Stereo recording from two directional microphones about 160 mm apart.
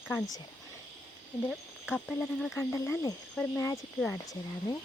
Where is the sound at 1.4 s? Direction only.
Centre (ahead or behind).